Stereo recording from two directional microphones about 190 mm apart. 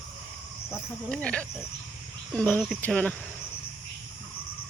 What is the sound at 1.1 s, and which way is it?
Speech, 5° left (ahead or behind).